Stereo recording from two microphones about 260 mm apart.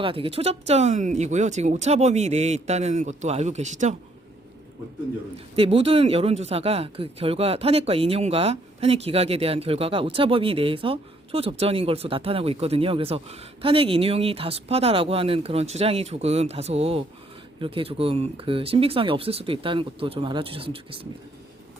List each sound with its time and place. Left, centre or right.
0.0 s speech: right
5.5 s speech: right